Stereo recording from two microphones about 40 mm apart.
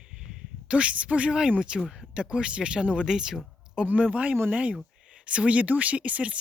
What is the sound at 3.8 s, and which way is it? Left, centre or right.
Speech, right.